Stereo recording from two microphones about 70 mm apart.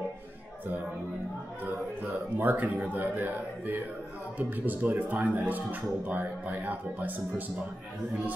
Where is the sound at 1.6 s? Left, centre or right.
Right.